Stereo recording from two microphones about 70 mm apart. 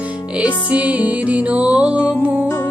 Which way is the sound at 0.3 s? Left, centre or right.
Centre.